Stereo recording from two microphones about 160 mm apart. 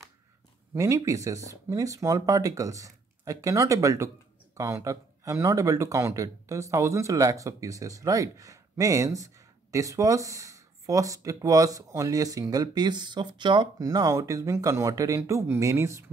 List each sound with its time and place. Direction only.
0.7 s speech: 20° right (ahead or behind)